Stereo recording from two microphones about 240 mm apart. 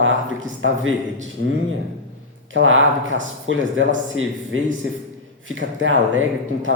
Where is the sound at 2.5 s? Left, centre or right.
Right.